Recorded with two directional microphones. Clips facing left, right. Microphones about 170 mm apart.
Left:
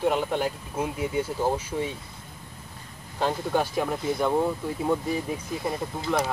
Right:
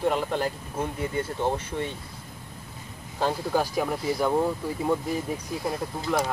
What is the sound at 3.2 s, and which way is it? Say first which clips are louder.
Speech: even; 5° right (ahead or behind).